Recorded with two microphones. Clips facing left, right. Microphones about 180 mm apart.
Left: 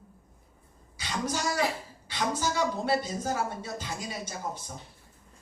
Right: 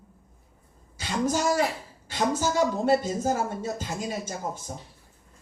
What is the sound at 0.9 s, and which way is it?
A woman's voice, 50° right (ahead or behind).